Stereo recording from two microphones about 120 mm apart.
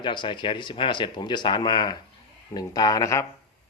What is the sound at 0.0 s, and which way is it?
Speech, 40° left (ahead or behind).